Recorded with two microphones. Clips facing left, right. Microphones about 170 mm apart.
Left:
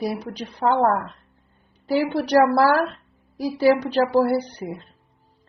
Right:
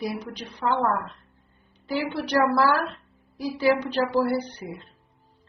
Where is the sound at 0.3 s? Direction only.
10° left (ahead or behind).